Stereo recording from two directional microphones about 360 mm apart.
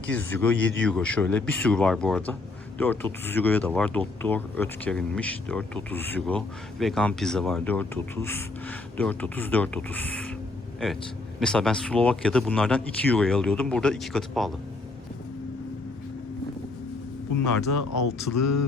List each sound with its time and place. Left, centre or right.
0.1 s speech: centre
11.3 s speech: centre
17.7 s speech: left